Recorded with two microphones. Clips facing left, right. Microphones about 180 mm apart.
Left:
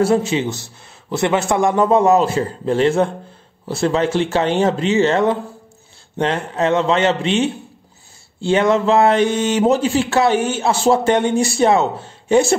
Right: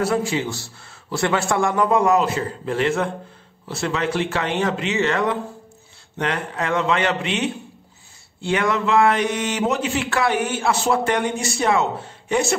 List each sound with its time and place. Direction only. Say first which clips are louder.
0.0 s speech: left 5 dB; 25° left (ahead or behind)